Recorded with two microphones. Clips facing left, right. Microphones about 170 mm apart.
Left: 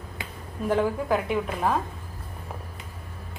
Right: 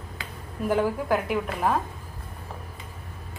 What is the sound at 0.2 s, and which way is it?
Finger snapping, 20° left (ahead or behind).